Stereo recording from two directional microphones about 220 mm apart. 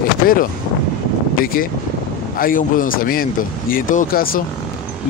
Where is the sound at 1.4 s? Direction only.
40° left (ahead or behind).